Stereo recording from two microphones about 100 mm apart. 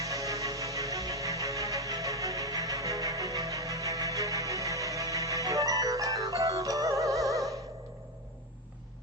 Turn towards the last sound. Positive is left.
turn(degrees=-35)  # may be behind; listen again after turning